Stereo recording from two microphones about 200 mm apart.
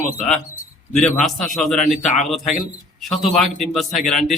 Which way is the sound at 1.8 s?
35° left (ahead or behind).